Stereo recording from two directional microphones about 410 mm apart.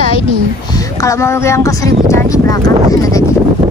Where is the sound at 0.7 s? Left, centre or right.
Centre.